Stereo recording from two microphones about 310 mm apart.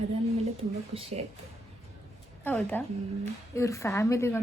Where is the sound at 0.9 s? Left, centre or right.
Centre.